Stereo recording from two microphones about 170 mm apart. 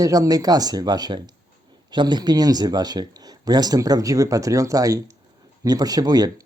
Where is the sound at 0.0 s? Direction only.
20° right (ahead or behind).